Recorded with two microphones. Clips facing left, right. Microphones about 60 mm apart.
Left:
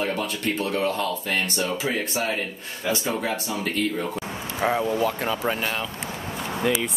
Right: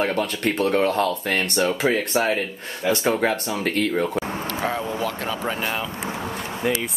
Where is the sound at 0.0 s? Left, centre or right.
Right.